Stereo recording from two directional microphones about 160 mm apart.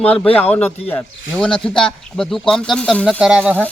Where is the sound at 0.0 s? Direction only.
10° left (ahead or behind).